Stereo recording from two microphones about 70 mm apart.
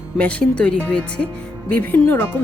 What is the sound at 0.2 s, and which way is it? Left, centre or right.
Speech, centre.